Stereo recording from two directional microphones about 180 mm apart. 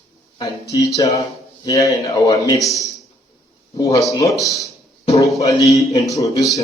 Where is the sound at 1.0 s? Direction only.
20° left (ahead or behind).